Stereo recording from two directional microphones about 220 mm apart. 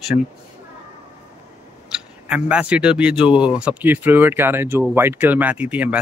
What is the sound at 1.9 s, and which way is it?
Speech, 5° right (ahead or behind).